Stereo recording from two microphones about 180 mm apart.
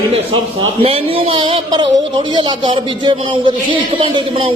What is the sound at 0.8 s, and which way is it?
Speech, 30° right (ahead or behind).